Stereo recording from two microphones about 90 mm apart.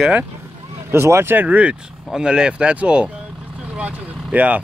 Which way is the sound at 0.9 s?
30° right (ahead or behind).